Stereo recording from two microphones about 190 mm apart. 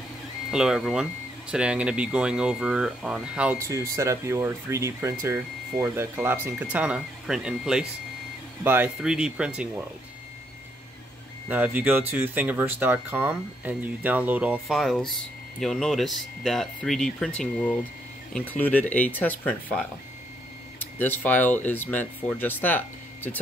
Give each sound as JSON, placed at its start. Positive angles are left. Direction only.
{"t": 0.5, "sound": "speech", "side_deg": -5}
{"t": 11.4, "sound": "speech", "side_deg": -10}